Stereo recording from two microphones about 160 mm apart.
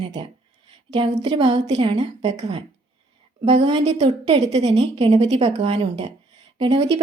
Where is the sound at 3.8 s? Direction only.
45° right (ahead or behind).